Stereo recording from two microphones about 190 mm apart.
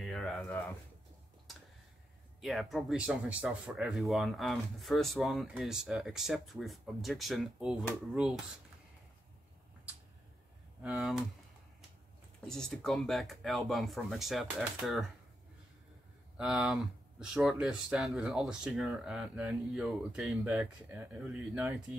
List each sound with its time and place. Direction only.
0.0 s a sound: centre (ahead or behind)
2.4 s speech: centre (ahead or behind)
10.8 s speech: centre (ahead or behind)
12.4 s speech: 5° left (ahead or behind)
16.3 s speech: centre (ahead or behind)